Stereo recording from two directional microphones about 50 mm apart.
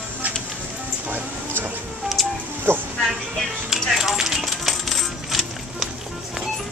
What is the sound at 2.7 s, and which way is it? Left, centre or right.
Speech, right.